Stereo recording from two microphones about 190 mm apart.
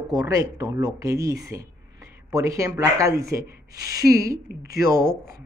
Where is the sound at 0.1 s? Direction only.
20° right (ahead or behind).